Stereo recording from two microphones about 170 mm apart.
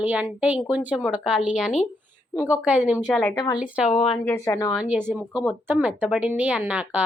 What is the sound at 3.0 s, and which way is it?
Speech, 5° left (ahead or behind).